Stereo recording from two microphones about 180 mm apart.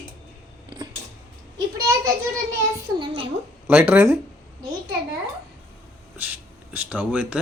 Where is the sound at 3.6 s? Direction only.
10° right (ahead or behind).